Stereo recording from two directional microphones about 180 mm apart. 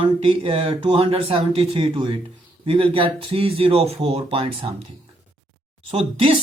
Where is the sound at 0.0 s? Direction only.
30° right (ahead or behind).